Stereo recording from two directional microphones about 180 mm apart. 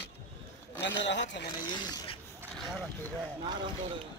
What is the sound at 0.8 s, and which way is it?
Speech, 85° left.